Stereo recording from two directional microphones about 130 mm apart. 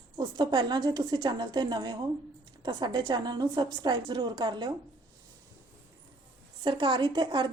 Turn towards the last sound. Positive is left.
turn(degrees=-35)  # may be behind; listen again after turning